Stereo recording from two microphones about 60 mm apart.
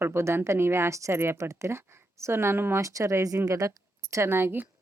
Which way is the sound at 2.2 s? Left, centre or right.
Right.